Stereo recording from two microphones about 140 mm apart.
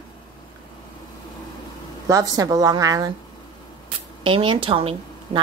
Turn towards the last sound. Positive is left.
turn(degrees=-40)  # may be behind; listen again after turning